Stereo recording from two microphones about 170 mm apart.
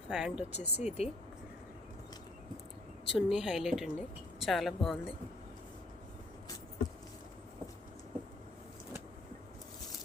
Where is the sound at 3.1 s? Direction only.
5° right (ahead or behind).